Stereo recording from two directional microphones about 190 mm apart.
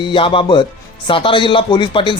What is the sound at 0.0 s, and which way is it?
Speech, 25° left (ahead or behind).